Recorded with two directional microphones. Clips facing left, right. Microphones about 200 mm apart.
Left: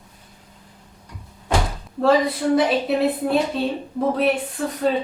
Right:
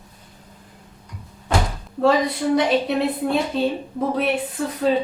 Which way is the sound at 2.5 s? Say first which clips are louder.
Even; centre (ahead or behind).